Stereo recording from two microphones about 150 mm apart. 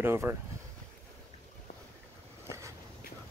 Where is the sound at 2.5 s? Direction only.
20° right (ahead or behind).